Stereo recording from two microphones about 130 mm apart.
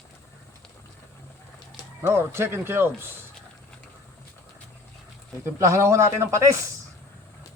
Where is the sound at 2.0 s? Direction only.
20° right (ahead or behind).